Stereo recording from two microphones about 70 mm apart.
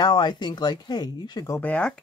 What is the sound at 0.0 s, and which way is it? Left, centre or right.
Speech, left.